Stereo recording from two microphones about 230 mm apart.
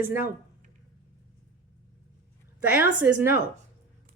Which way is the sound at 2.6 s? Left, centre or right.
Centre.